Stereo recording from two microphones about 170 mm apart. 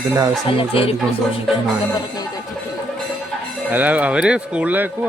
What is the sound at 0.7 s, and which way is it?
Speech, 35° left (ahead or behind).